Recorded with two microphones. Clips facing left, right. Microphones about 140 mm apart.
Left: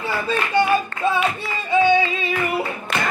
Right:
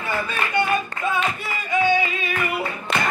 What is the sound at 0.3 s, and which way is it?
Music, 30° left (ahead or behind).